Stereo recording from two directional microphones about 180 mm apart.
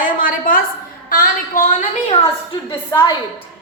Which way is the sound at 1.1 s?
50° left (ahead or behind).